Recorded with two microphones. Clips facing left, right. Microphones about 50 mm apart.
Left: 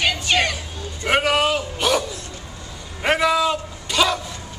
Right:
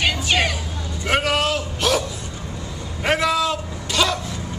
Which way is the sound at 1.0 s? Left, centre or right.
Centre.